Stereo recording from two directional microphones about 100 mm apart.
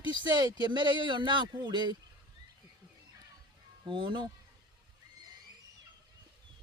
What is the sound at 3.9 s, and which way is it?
Speech, 55° right (ahead or behind).